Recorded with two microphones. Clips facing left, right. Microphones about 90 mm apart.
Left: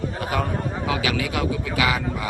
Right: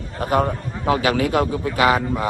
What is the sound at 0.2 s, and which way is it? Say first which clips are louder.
A man's voice: right 7 dB; 45° right (ahead or behind).